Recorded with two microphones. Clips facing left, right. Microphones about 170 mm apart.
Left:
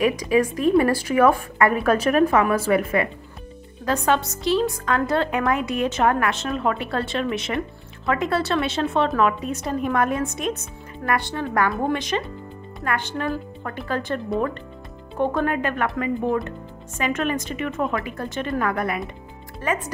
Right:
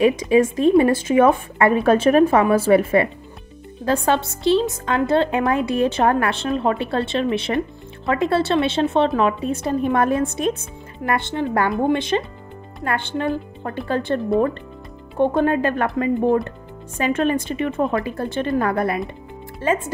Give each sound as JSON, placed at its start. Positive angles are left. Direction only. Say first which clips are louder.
{"t": 0.0, "sound": "a woman's voice", "louder": "right 4 dB", "side_deg": -25}